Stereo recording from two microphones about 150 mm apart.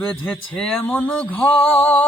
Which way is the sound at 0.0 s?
5° left (ahead or behind).